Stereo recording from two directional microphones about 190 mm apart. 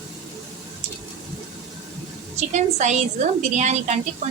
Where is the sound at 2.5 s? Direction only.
35° right (ahead or behind).